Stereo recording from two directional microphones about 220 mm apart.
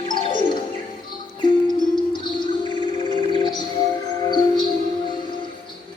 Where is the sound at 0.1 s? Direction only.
20° left (ahead or behind).